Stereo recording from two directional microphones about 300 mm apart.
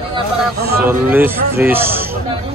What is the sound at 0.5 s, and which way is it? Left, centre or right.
Speech, right.